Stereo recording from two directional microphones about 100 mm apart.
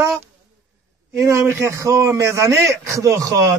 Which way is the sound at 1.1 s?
30° right (ahead or behind).